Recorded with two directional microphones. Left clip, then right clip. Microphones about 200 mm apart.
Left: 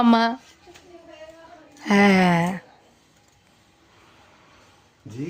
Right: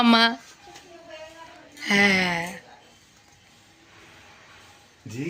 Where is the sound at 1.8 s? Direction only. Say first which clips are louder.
Left 2 dB; 40° left (ahead or behind).